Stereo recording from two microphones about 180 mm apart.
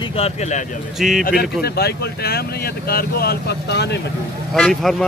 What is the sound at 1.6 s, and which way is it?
Speech, 60° left (ahead or behind).